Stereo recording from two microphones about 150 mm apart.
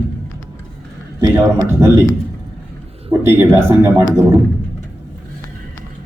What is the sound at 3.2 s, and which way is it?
Speech, 15° right (ahead or behind).